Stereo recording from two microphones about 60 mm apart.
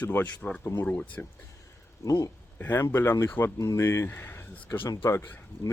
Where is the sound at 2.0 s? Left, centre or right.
Left.